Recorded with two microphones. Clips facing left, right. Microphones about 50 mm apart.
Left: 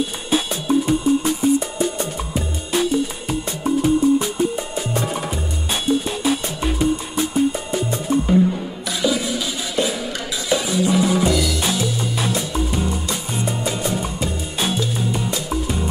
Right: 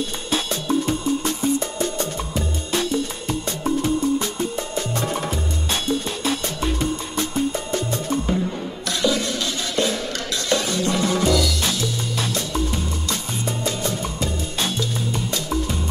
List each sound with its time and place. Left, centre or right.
0.0 s music: centre
9.0 s a sound: centre
10.5 s music: centre